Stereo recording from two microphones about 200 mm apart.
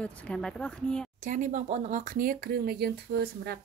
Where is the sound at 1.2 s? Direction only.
40° right (ahead or behind).